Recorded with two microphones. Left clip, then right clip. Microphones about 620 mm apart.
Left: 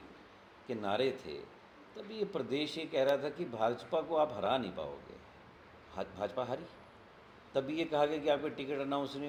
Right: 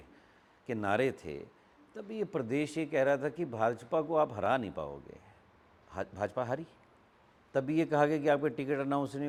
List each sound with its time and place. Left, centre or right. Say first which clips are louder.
0.7 s speech: right 3 dB; right
5.9 s speech: right 2 dB; right